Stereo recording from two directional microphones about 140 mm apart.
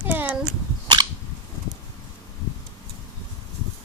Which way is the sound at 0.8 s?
30° right (ahead or behind).